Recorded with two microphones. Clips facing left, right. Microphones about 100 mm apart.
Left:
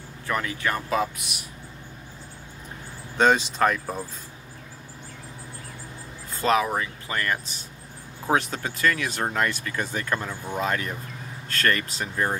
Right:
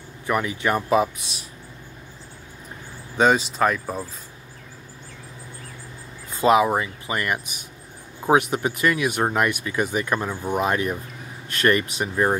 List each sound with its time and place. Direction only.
0.3 s speech: 20° right (ahead or behind)
3.2 s speech: 5° right (ahead or behind)
6.3 s speech: 15° right (ahead or behind)